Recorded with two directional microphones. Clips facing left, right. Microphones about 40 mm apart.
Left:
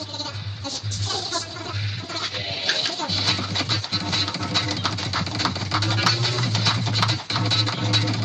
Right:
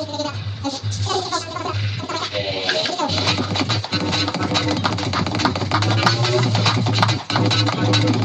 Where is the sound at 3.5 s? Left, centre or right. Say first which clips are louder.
Right 4 dB; right.